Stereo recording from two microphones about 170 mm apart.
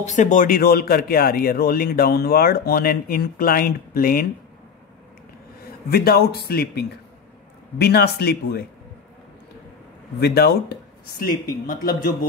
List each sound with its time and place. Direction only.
0.0 s speech: 45° left (ahead or behind)
5.9 s speech: 65° left (ahead or behind)
10.2 s speech: 70° left (ahead or behind)